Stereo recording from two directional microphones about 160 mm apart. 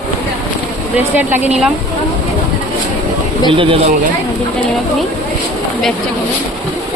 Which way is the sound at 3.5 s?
35° right (ahead or behind).